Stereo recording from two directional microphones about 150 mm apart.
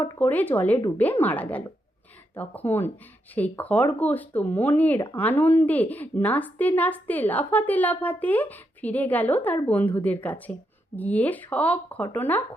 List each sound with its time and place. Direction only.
0.0 s a woman's voice: 10° left (ahead or behind)